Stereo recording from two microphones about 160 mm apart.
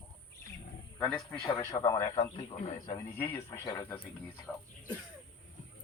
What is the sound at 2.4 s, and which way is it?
Speech, 40° left (ahead or behind).